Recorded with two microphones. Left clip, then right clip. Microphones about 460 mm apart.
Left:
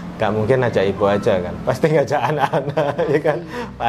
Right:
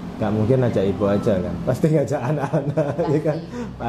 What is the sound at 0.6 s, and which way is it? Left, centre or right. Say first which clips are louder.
A man's voice: left 4 dB; left.